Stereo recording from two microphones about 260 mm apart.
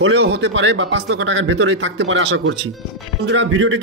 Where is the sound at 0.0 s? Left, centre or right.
Right.